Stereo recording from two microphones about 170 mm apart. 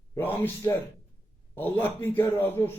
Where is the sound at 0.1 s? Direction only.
10° left (ahead or behind).